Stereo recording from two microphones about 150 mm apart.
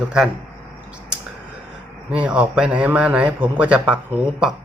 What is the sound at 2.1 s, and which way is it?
A man's voice, 5° right (ahead or behind).